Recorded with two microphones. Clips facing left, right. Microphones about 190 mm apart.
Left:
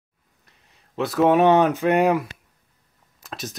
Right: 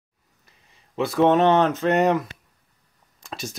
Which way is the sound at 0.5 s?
Centre (ahead or behind).